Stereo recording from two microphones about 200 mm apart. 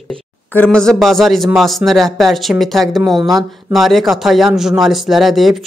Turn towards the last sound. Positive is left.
turn(degrees=0)  # may be behind; listen again after turning